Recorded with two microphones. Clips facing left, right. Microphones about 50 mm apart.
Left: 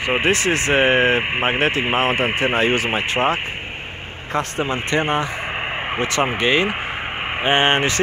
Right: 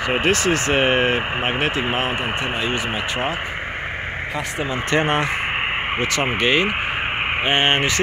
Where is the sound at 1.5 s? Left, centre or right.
Left.